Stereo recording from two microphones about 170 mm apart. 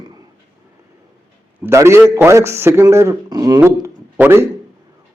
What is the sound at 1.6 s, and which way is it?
A man's voice, 15° right (ahead or behind).